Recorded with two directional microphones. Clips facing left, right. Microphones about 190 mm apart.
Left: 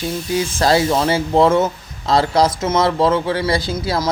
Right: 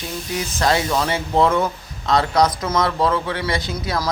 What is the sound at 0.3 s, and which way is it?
Speech, 30° left (ahead or behind).